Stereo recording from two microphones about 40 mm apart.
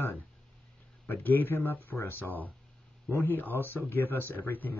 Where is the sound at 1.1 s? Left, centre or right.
Left.